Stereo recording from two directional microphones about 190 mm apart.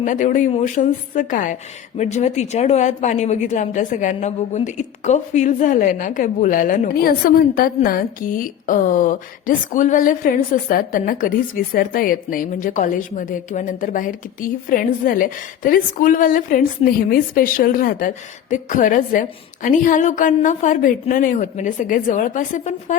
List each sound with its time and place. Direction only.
0.0 s speech: 40° left (ahead or behind)